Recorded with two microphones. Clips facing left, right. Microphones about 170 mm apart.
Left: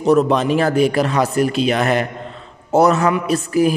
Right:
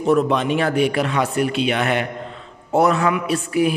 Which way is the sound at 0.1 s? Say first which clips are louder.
Left 3 dB; 40° left (ahead or behind).